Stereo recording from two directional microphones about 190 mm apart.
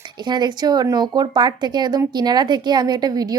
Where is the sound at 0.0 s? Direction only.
25° right (ahead or behind).